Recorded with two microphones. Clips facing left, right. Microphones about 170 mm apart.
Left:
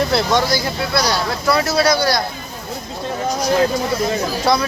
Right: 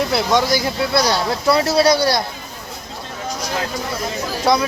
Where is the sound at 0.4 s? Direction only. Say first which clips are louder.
Right 1 dB; 20° right (ahead or behind).